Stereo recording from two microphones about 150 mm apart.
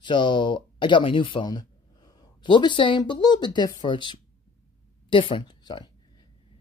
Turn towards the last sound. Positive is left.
turn(degrees=30)  # may be behind; listen again after turning